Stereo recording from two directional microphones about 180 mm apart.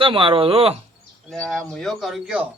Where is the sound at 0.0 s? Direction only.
30° right (ahead or behind).